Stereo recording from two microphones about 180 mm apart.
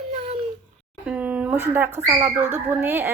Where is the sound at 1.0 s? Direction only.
5° right (ahead or behind).